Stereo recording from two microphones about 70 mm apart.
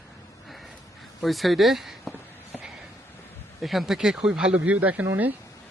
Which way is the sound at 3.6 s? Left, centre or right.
Centre.